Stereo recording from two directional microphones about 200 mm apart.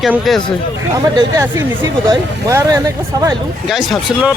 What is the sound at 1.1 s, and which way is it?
A man's voice, 15° right (ahead or behind).